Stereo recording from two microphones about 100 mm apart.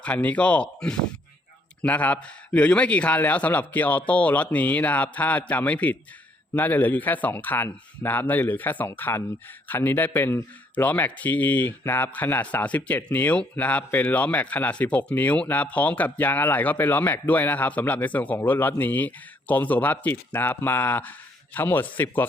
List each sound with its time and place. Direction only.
0.0 s speech: 15° left (ahead or behind)